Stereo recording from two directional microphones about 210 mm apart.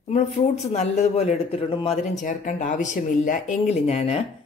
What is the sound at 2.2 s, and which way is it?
Speech, 40° left (ahead or behind).